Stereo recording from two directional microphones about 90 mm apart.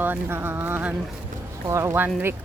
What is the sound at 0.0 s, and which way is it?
Speech, 25° right (ahead or behind).